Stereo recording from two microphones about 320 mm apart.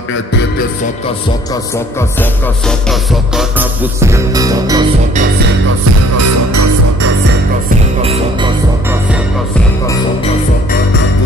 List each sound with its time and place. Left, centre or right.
1.5 s speech: centre
2.9 s music: centre
6.1 s music: right
8.0 s music: centre